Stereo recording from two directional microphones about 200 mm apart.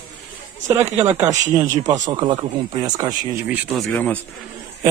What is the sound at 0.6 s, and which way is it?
A man's voice, 10° right (ahead or behind).